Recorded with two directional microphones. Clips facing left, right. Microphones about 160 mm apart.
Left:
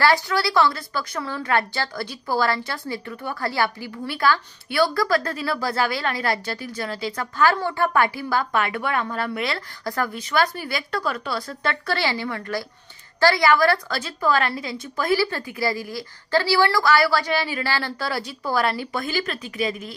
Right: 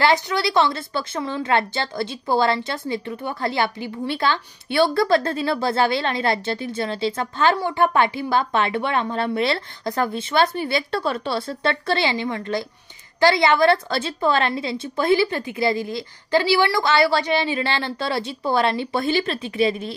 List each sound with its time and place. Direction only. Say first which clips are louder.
0.0 s a woman's voice: right 1 dB; 20° right (ahead or behind)